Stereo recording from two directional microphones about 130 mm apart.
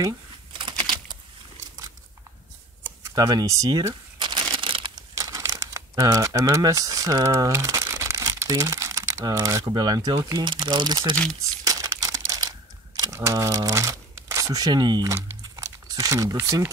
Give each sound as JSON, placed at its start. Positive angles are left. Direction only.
{"t": 0.0, "sound": "a sound", "side_deg": -35}
{"t": 2.8, "sound": "crumpling", "side_deg": -30}
{"t": 5.1, "sound": "speech", "side_deg": -25}
{"t": 11.6, "sound": "crumpling", "side_deg": -25}
{"t": 16.3, "sound": "speech", "side_deg": -20}